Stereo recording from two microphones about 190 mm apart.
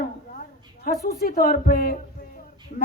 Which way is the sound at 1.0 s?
50° left (ahead or behind).